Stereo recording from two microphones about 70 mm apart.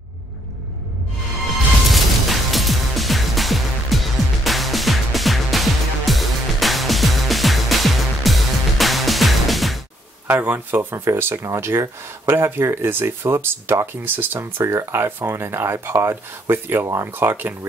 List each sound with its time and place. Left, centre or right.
1.4 s music: centre
10.2 s speech: right